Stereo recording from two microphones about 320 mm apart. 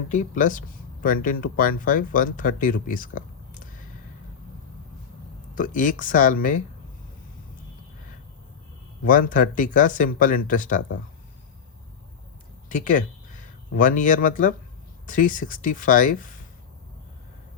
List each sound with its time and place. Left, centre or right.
0.1 s speech: left
5.5 s speech: left
9.0 s speech: left
12.6 s speech: left